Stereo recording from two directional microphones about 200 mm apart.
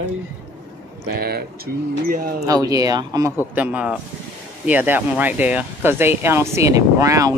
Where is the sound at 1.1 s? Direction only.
50° right (ahead or behind).